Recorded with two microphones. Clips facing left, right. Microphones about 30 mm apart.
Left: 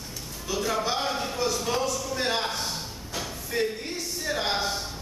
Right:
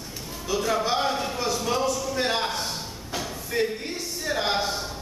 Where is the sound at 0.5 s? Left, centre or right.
Centre.